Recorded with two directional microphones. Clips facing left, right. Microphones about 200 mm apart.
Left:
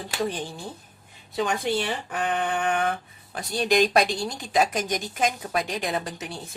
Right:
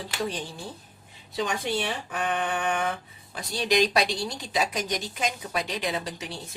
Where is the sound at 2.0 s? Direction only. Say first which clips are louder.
Left 2 dB; 55° left (ahead or behind).